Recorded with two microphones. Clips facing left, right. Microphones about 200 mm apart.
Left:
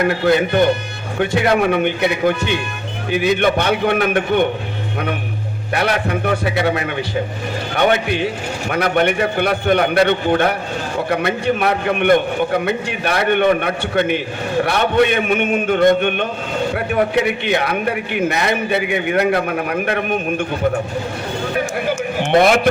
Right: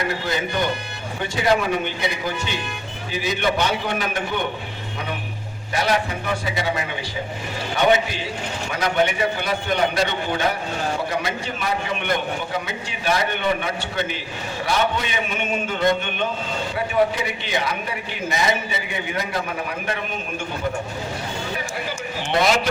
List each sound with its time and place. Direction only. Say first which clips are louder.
0.0 s a man's voice: left 10 dB; 60° left (ahead or behind)
5.7 s a man's voice: left 3 dB; 60° left (ahead or behind)
21.5 s a sound: left 9 dB; 55° left (ahead or behind)